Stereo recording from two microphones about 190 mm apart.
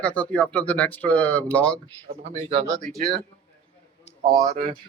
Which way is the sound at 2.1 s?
35° right (ahead or behind).